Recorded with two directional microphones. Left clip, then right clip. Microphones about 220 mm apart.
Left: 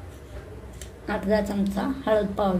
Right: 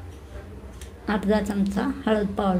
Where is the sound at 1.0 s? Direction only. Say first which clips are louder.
Even; 35° right (ahead or behind).